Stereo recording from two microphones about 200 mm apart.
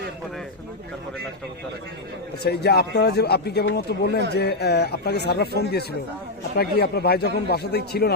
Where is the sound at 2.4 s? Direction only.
55° left (ahead or behind).